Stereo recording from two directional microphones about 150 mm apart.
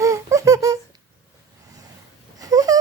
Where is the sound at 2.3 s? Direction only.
25° right (ahead or behind).